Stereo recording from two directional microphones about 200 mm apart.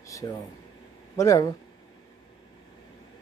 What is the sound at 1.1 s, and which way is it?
Speech, 15° left (ahead or behind).